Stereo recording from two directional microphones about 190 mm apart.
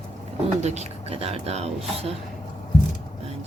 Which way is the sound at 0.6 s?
35° right (ahead or behind).